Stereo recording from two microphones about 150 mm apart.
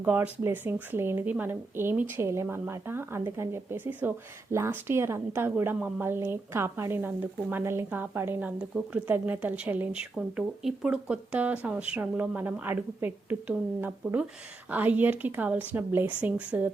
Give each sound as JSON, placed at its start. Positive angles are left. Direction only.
{"t": 0.0, "sound": "a woman's voice", "side_deg": -10}